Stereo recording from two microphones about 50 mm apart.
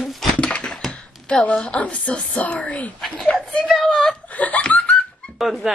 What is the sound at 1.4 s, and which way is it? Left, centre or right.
A woman's voice, left.